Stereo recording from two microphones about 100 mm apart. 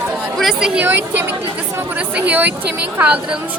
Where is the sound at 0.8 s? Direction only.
20° right (ahead or behind).